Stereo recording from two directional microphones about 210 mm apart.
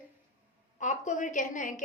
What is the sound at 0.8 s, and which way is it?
A woman's voice, 35° left (ahead or behind).